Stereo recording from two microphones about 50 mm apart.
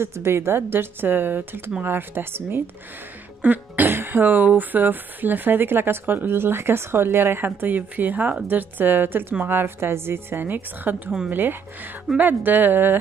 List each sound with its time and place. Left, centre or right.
0.0 s a woman's voice: right
3.4 s a woman's voice: right